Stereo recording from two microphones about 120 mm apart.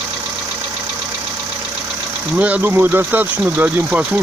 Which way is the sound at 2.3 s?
10° right (ahead or behind).